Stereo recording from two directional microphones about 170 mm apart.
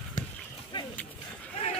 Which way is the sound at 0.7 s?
30° left (ahead or behind).